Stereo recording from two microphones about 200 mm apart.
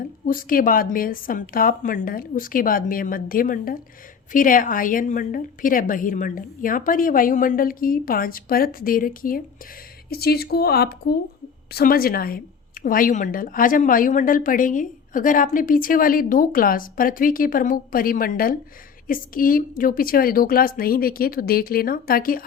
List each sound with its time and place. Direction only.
0.3 s a woman's voice: 45° left (ahead or behind)